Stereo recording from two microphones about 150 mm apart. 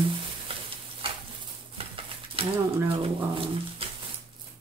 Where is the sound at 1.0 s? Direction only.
35° right (ahead or behind).